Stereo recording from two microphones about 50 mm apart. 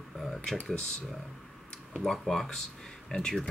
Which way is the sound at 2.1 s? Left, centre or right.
Centre.